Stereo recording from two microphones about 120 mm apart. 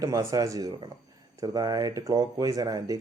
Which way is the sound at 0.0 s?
25° right (ahead or behind).